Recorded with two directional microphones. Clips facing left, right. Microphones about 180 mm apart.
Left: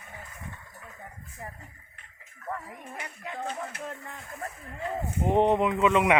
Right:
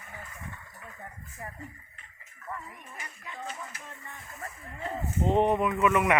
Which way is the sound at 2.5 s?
70° left (ahead or behind).